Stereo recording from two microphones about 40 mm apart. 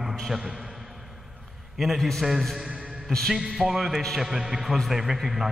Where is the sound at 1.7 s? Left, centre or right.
Centre.